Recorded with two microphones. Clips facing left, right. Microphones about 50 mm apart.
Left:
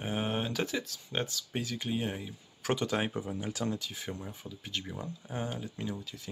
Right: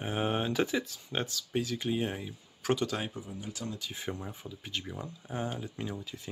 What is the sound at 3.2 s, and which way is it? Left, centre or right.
Speech, left.